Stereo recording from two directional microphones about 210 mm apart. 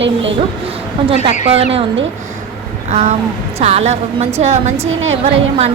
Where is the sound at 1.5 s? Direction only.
30° right (ahead or behind).